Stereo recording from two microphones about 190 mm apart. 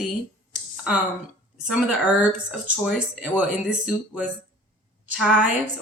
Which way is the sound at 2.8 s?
5° right (ahead or behind).